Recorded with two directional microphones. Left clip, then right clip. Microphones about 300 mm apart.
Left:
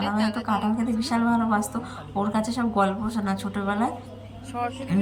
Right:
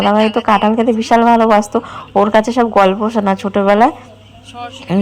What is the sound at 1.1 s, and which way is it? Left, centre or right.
A woman's voice, right.